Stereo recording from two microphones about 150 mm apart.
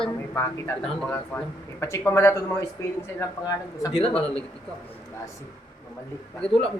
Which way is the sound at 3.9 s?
40° left (ahead or behind).